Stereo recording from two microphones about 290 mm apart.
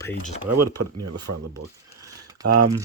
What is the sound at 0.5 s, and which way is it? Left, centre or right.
Speech, right.